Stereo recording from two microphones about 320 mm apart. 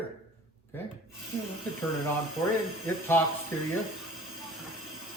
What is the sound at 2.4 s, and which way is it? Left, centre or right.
Speech, centre.